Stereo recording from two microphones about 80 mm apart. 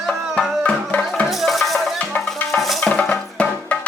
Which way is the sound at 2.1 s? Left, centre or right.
Left.